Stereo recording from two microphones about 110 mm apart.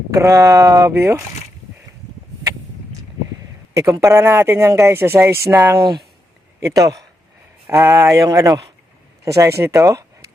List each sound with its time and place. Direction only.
0.1 s speech: 30° right (ahead or behind)
3.8 s speech: 30° right (ahead or behind)